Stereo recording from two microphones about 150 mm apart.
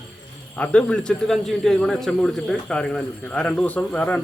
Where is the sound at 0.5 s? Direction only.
10° left (ahead or behind).